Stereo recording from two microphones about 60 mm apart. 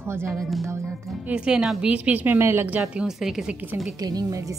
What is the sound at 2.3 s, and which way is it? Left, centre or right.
Speech, right.